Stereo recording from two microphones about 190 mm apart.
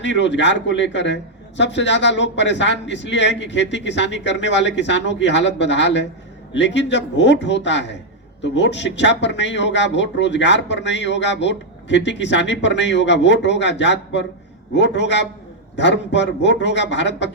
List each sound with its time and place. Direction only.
0.0 s a man's voice: 70° left (ahead or behind)